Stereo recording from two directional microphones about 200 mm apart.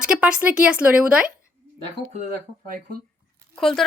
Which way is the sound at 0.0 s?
5° right (ahead or behind).